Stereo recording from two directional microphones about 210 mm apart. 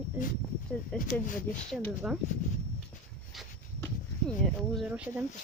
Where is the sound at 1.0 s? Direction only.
40° left (ahead or behind).